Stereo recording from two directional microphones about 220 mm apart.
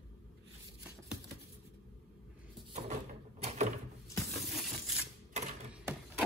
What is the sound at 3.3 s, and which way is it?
Door, 30° right (ahead or behind).